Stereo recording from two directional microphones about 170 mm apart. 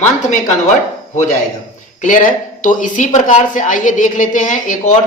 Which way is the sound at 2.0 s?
50° left (ahead or behind).